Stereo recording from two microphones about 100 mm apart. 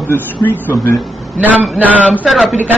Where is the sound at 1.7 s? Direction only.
15° right (ahead or behind).